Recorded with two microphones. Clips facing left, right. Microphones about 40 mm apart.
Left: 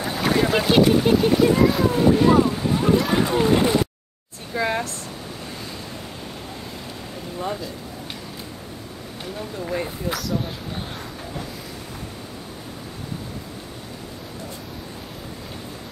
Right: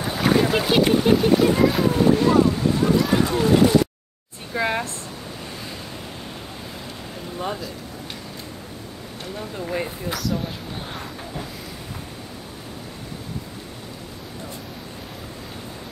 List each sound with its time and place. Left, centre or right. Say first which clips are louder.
0.0 s boat: right 1 dB; centre
1.0 s speech: even; centre
2.8 s speech: left 1 dB; centre
4.6 s speech: even; centre
9.7 s speech: left 1 dB; centre